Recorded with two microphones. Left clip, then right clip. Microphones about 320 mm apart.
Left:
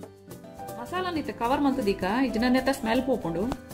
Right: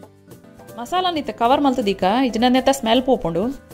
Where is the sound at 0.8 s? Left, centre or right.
Right.